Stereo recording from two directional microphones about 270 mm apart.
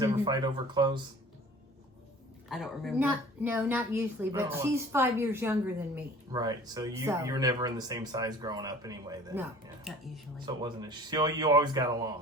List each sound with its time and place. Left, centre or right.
0.0 s a woman's voice: centre
2.5 s a woman's voice: centre